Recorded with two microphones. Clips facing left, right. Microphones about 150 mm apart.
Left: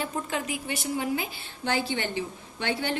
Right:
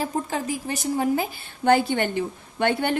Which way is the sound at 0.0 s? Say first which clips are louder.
Right 4 dB; 35° right (ahead or behind).